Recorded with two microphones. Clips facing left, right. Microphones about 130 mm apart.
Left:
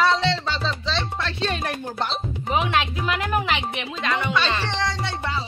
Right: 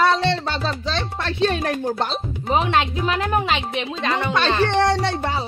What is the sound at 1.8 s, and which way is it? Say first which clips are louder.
Speech: right 4 dB; 40° right (ahead or behind).